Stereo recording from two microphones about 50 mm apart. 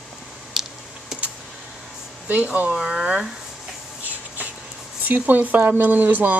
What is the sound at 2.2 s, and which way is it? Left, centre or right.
Speech, right.